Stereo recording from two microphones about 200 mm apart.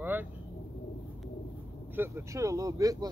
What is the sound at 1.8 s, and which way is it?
Speech, 10° right (ahead or behind).